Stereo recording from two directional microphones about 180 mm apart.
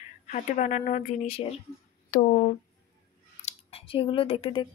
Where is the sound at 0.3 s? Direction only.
45° left (ahead or behind).